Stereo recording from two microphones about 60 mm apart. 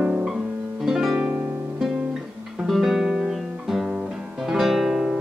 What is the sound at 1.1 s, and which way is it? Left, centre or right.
Music, centre.